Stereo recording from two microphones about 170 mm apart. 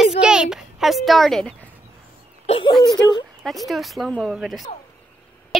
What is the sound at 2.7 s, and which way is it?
Whimper, 25° left (ahead or behind).